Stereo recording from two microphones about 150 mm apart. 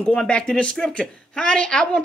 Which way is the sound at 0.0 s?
5° left (ahead or behind).